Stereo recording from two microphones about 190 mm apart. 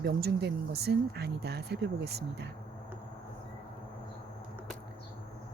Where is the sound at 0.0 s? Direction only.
60° right (ahead or behind).